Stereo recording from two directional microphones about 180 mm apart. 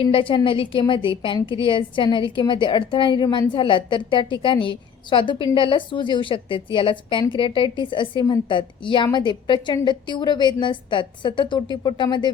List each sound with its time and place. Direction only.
0.0 s a woman's voice: 30° left (ahead or behind)